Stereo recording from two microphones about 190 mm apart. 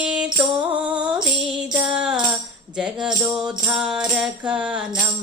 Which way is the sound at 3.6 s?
5° right (ahead or behind).